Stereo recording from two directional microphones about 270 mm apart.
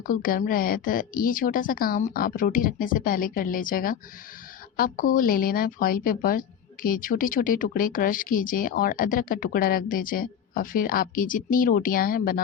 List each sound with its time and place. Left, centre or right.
0.1 s speech: left